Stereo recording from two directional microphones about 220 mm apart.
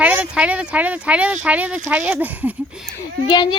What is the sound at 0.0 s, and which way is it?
Speech, 5° right (ahead or behind).